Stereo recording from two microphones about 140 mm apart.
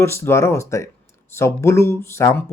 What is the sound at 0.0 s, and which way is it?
Speech, 20° left (ahead or behind).